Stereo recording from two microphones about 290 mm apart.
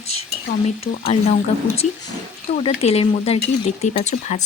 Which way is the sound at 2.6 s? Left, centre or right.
Left.